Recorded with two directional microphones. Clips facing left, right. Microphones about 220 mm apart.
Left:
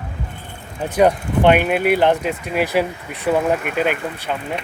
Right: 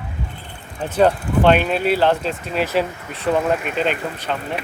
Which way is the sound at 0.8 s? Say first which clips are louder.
Left 1 dB; 15° left (ahead or behind).